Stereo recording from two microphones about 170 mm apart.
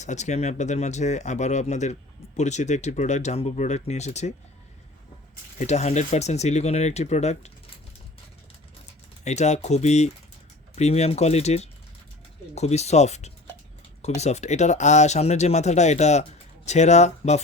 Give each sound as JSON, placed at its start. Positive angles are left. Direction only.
{"t": 0.0, "sound": "speech", "side_deg": 45}
{"t": 5.5, "sound": "speech", "side_deg": 40}
{"t": 9.2, "sound": "speech", "side_deg": 40}